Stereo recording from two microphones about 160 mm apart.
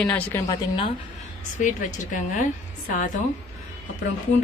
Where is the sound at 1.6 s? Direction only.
50° left (ahead or behind).